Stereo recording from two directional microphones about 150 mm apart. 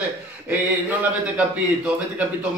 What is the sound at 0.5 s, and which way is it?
A man's voice, 10° right (ahead or behind).